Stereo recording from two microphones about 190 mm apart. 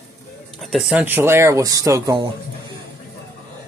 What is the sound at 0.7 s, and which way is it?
Speech, 5° right (ahead or behind).